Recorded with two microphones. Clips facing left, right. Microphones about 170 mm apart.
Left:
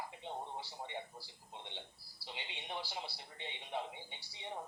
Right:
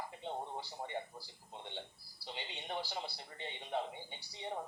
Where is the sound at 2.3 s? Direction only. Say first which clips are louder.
Right 3 dB; 40° right (ahead or behind).